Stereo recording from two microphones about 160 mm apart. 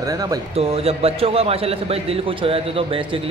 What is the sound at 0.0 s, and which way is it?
Speech, 25° right (ahead or behind).